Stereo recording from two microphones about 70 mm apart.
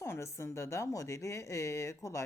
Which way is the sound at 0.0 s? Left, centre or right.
Left.